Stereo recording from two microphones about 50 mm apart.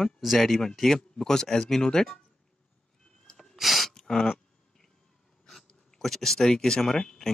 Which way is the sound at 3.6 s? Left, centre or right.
Centre.